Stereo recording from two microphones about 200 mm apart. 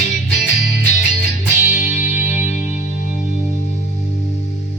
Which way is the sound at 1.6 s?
40° left (ahead or behind).